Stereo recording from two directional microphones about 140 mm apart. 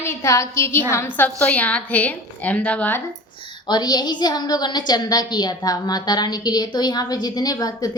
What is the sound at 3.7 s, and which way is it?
A woman's voice, 30° left (ahead or behind).